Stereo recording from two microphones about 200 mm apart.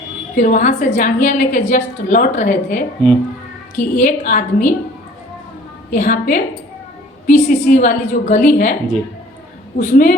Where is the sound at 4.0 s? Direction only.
40° left (ahead or behind).